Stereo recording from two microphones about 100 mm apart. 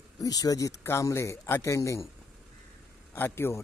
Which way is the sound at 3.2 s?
25° left (ahead or behind).